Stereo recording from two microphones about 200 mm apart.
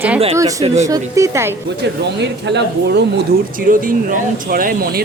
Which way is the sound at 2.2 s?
60° right (ahead or behind).